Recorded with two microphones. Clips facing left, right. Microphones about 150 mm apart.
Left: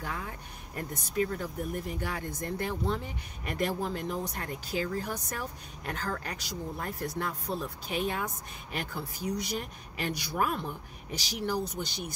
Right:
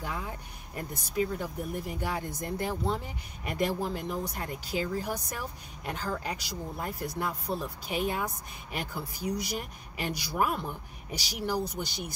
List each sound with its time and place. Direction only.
0.0 s speech: 15° right (ahead or behind)